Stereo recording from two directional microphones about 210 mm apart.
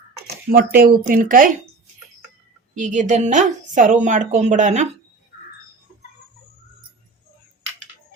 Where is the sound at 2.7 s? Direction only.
35° right (ahead or behind).